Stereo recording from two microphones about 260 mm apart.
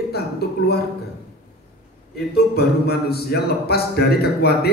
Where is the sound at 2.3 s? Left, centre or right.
Left.